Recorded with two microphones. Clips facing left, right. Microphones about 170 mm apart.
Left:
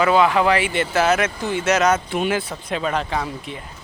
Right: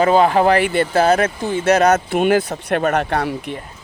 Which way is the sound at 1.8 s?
45° right (ahead or behind).